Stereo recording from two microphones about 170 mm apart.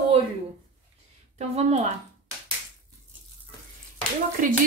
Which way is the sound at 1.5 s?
40° right (ahead or behind).